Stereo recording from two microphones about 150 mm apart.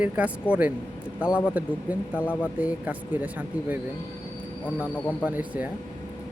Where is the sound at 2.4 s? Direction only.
10° right (ahead or behind).